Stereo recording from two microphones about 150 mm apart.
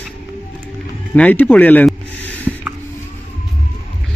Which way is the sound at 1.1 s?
10° left (ahead or behind).